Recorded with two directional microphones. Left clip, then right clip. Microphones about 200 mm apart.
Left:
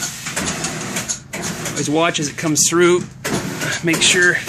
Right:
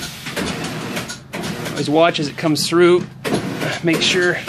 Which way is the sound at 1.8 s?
5° left (ahead or behind).